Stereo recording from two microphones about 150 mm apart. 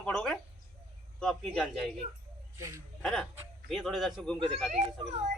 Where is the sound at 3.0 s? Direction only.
5° left (ahead or behind).